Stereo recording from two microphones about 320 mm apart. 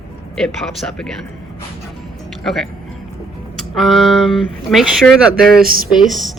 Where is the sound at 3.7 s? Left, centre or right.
Centre.